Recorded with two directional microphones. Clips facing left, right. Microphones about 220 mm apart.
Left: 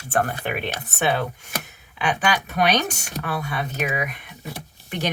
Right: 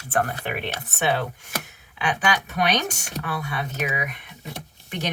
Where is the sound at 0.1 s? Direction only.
35° left (ahead or behind).